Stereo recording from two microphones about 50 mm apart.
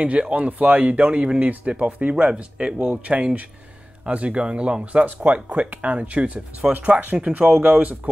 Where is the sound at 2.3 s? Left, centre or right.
Centre.